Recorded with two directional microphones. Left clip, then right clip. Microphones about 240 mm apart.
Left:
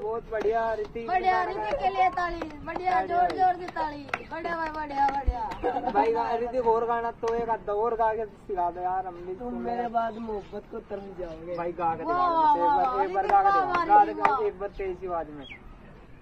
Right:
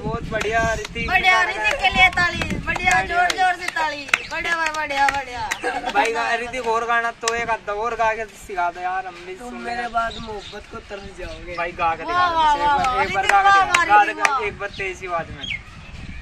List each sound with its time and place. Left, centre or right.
0.3 s speech: centre
9.7 s speech: centre
11.5 s speech: centre